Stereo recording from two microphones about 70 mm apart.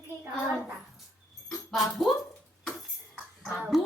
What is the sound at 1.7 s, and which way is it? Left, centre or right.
Speech, centre.